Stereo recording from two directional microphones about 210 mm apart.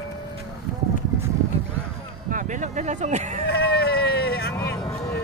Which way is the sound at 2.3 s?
35° right (ahead or behind).